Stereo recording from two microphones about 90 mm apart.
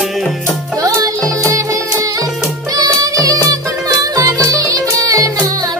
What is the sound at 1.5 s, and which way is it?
Music, 35° right (ahead or behind).